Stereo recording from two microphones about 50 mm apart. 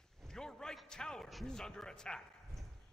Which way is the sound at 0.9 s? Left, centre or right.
Centre.